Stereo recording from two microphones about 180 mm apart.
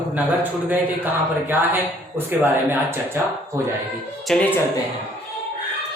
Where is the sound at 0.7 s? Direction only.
10° right (ahead or behind).